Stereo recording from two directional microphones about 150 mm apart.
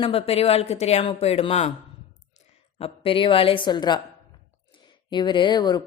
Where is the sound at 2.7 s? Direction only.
40° left (ahead or behind).